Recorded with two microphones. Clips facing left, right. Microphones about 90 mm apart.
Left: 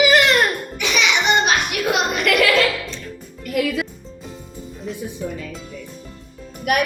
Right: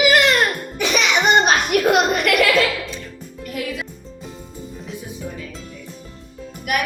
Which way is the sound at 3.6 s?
65° left (ahead or behind).